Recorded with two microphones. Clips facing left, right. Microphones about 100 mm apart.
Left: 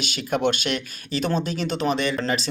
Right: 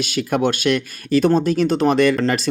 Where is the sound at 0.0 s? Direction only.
50° right (ahead or behind).